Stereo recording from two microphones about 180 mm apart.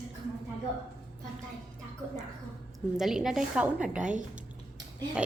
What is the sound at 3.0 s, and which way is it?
A woman's voice, 5° right (ahead or behind).